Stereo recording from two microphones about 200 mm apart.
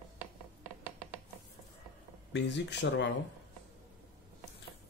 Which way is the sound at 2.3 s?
60° left (ahead or behind).